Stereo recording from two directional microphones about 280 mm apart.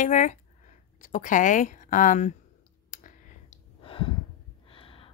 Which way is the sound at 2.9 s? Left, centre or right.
Left.